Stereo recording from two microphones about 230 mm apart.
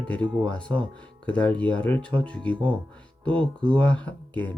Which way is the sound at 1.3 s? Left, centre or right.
Centre.